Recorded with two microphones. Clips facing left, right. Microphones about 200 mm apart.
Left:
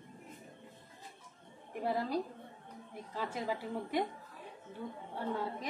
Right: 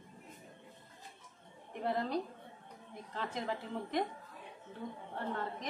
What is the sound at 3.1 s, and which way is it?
Speech, 10° left (ahead or behind).